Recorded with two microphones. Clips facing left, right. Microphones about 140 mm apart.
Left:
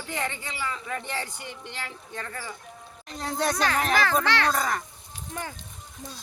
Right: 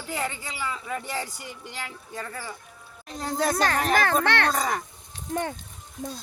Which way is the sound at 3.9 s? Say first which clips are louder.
Right 2 dB; 55° right (ahead or behind).